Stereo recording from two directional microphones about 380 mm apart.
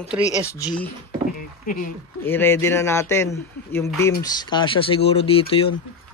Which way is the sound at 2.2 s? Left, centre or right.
Centre.